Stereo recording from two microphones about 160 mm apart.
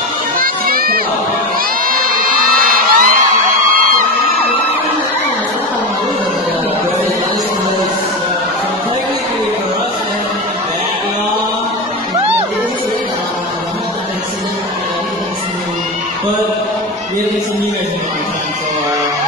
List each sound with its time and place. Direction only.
0.4 s children playing: 65° right (ahead or behind)
2.6 s crowd: 60° right (ahead or behind)